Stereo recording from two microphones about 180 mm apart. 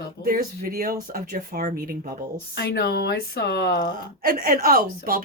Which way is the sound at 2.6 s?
60° left (ahead or behind).